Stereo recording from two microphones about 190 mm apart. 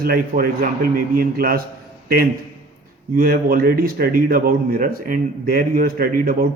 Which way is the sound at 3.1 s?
50° right (ahead or behind).